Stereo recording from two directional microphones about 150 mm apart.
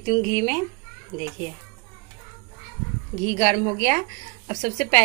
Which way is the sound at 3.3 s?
20° right (ahead or behind).